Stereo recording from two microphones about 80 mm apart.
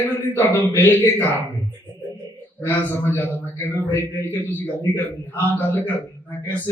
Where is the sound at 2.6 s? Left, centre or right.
Left.